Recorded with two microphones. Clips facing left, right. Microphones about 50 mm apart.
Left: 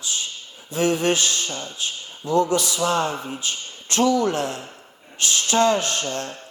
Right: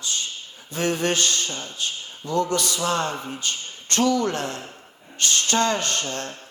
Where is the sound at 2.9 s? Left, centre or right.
Centre.